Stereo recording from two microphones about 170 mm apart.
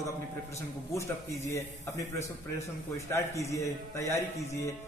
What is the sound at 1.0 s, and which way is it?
A man's voice, 15° left (ahead or behind).